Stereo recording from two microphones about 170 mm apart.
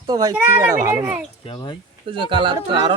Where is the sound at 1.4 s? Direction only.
30° left (ahead or behind).